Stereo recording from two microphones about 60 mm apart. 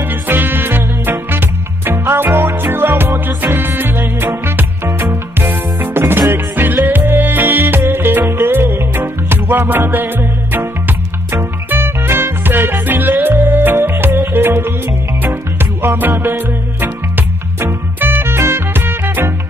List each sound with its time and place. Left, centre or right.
0.1 s music: right
15.8 s music: right